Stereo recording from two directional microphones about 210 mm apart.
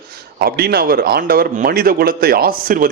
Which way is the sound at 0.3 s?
50° right (ahead or behind).